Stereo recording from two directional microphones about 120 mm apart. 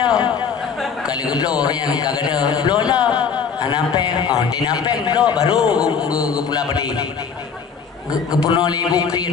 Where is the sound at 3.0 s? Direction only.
10° right (ahead or behind).